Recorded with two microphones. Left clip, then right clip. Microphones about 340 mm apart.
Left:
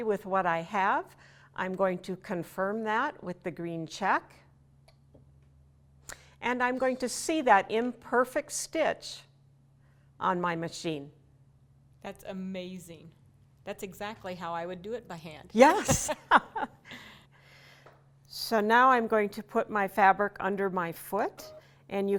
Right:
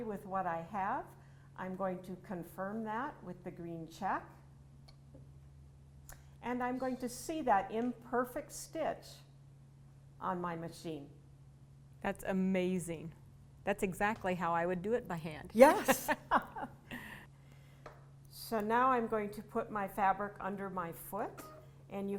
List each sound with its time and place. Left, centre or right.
0.0 s a woman's voice: left
6.1 s a woman's voice: left
12.0 s a woman's voice: centre
15.5 s speech: left
16.3 s chuckle: left
16.9 s a sound: centre
17.4 s a sound: left
18.3 s a woman's voice: left